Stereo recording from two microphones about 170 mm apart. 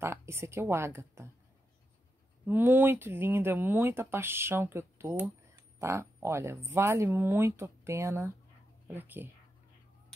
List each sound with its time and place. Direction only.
0.0 s a woman's voice: 15° right (ahead or behind)
2.4 s speech: 10° right (ahead or behind)